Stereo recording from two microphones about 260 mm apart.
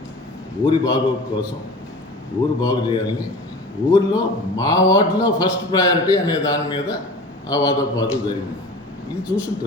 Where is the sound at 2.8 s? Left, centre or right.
Centre.